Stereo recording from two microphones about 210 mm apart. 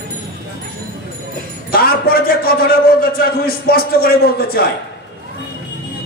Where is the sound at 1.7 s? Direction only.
45° left (ahead or behind).